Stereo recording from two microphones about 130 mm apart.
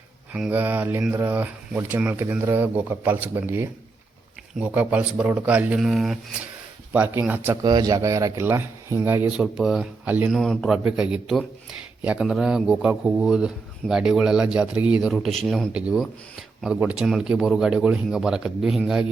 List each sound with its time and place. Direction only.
0.3 s speech: 10° right (ahead or behind)
6.9 s speech: 15° right (ahead or behind)
7.6 s speech: 30° right (ahead or behind)
9.3 s a man's voice: 5° right (ahead or behind)
10.1 s speech: 15° right (ahead or behind)
10.3 s a man's voice: 5° left (ahead or behind)
10.8 s a man's voice: 5° right (ahead or behind)